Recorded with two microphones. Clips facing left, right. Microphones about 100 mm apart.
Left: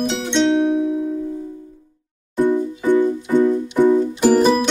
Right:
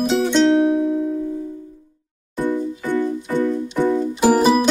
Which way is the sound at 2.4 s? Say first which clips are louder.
Left 4 dB; 20° left (ahead or behind).